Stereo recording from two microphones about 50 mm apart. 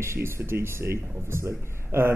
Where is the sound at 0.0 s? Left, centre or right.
Right.